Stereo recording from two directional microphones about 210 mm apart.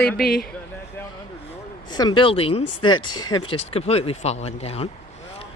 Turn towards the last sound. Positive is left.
turn(degrees=30)  # may be behind; listen again after turning